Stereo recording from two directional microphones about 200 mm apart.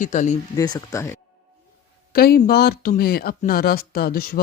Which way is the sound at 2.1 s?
50° left (ahead or behind).